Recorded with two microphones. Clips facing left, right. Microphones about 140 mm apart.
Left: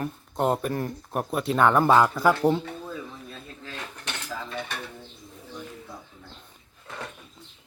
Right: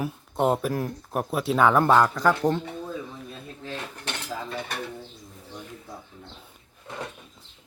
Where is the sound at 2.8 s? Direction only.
20° right (ahead or behind).